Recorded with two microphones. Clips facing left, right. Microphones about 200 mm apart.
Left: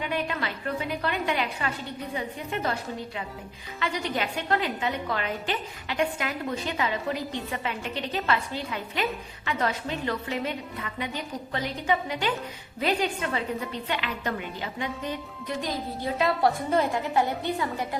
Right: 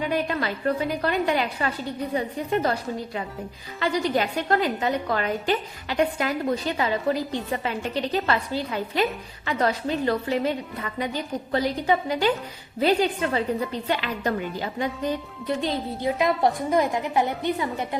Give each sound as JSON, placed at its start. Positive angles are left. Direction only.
{"t": 0.0, "sound": "a woman's voice", "side_deg": -40}
{"t": 3.8, "sound": "a woman's voice", "side_deg": -35}
{"t": 16.1, "sound": "a woman's voice", "side_deg": -15}